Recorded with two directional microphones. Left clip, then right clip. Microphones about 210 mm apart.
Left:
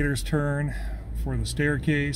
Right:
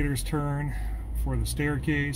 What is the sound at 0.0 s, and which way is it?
Speech, 20° left (ahead or behind).